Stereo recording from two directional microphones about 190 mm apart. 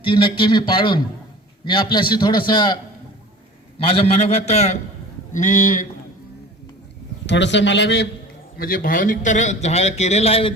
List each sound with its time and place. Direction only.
0.0 s a man's voice: 25° left (ahead or behind)
3.8 s a man's voice: 30° left (ahead or behind)
7.3 s a man's voice: 70° left (ahead or behind)
8.5 s a man's voice: 50° left (ahead or behind); by 10.5 s 30° left (ahead or behind)